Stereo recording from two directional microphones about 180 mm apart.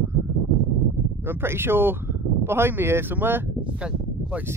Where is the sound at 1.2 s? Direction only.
10° right (ahead or behind).